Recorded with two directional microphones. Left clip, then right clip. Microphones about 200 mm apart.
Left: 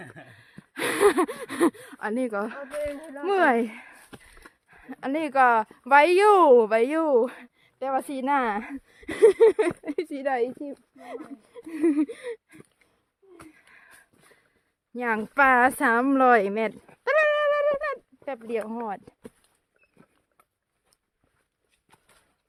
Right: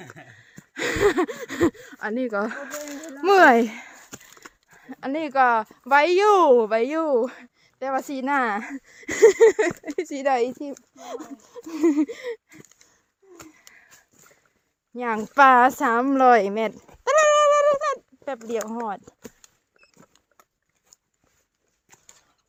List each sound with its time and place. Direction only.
0.3 s a sound: centre (ahead or behind)
2.4 s speech: 25° right (ahead or behind)
4.7 s speech: centre (ahead or behind)
10.1 s speech: 10° right (ahead or behind)
10.9 s a sound: 15° right (ahead or behind)
13.5 s wheeze: centre (ahead or behind)
14.9 s speech: centre (ahead or behind)
17.2 s bird: 15° right (ahead or behind)
18.7 s speech: 5° right (ahead or behind)
19.8 s rodents: 55° right (ahead or behind)
20.9 s a sound: centre (ahead or behind)